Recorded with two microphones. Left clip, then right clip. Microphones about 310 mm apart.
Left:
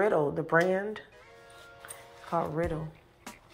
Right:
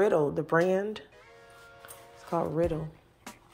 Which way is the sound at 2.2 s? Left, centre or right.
Right.